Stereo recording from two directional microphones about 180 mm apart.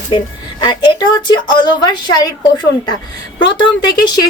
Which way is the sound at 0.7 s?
25° left (ahead or behind).